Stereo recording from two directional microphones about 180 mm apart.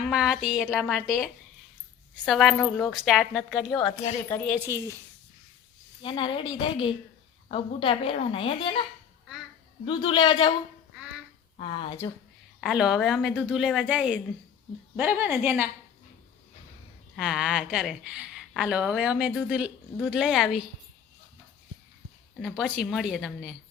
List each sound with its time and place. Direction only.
0.0 s a woman's voice: 5° right (ahead or behind)
4.3 s speech: 10° left (ahead or behind)
4.6 s a woman's voice: 15° right (ahead or behind)
6.0 s a woman's voice: 25° left (ahead or behind)
9.8 s a woman's voice: 30° left (ahead or behind)
11.5 s a woman's voice: 30° left (ahead or behind)
12.5 s a woman's voice: 5° right (ahead or behind)
17.2 s a woman's voice: 5° right (ahead or behind)
22.4 s a woman's voice: 5° right (ahead or behind)